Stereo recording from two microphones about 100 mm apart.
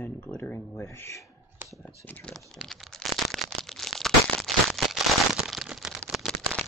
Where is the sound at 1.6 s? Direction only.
20° right (ahead or behind).